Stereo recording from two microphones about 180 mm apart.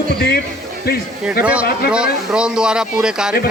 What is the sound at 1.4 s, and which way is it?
A man's voice, 5° right (ahead or behind).